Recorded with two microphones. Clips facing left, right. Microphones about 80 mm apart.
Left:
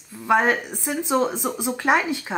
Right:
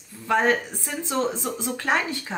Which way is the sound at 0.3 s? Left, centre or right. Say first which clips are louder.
Left 2 dB; centre.